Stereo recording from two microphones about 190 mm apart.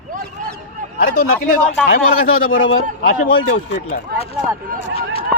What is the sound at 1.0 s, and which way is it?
Speech, 50° left (ahead or behind).